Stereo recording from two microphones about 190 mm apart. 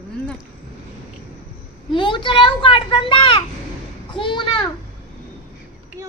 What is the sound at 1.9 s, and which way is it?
A child's voice, 25° left (ahead or behind).